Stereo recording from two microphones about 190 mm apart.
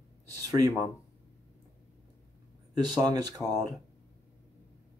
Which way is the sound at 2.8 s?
20° right (ahead or behind).